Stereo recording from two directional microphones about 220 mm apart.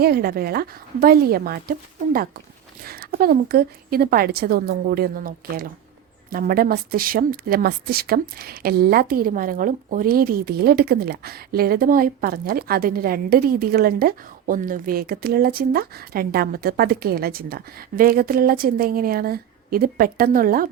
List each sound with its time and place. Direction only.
0.0 s speech: 45° right (ahead or behind)
2.8 s speech: 40° right (ahead or behind)